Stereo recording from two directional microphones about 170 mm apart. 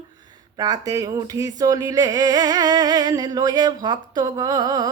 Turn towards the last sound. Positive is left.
turn(degrees=-25)  # may be behind; listen again after turning